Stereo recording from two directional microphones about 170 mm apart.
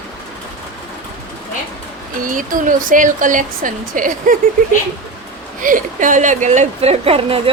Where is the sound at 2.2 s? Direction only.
50° right (ahead or behind).